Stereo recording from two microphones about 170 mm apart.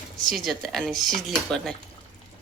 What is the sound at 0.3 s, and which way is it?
Speech, centre (ahead or behind).